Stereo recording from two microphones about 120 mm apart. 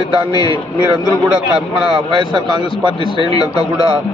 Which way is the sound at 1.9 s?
40° right (ahead or behind).